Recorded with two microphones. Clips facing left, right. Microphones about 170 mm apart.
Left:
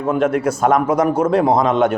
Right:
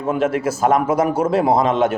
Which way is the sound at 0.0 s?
5° right (ahead or behind).